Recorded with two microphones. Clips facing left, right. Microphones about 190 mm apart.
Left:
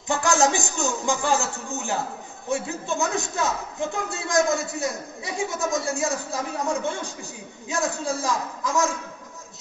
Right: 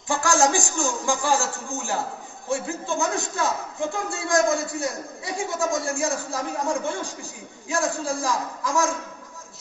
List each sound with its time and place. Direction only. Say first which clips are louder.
0.1 s a man's voice: even; 20° left (ahead or behind)